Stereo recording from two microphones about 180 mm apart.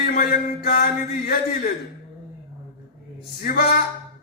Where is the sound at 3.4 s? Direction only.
55° left (ahead or behind).